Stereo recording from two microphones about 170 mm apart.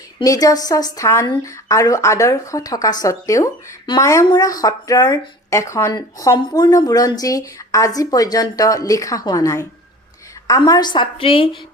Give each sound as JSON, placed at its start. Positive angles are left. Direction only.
{"t": 0.2, "sound": "a woman's voice", "side_deg": 20}